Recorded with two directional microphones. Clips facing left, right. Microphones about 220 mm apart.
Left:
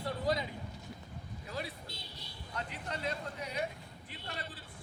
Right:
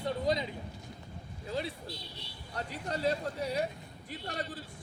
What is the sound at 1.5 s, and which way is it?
A man's voice, 25° right (ahead or behind).